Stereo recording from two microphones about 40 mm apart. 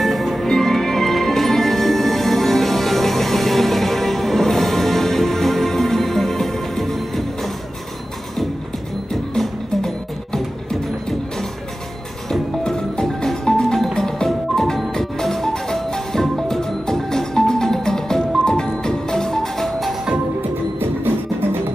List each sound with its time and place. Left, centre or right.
0.0 s music: centre
9.4 s music: centre
20.8 s music: right